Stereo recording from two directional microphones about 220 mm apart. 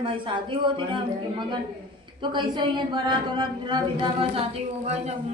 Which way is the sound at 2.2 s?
20° right (ahead or behind).